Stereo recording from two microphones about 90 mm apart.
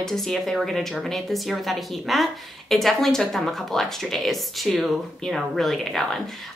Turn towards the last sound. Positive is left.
turn(degrees=0)  # may be behind; listen again after turning